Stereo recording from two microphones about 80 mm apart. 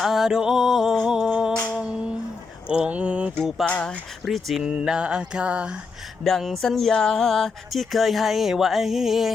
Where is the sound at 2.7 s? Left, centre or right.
Centre.